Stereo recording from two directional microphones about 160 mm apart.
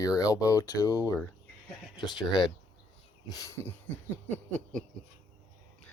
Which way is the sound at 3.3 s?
20° left (ahead or behind).